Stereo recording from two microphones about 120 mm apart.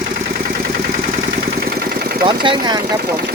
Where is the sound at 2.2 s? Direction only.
40° right (ahead or behind).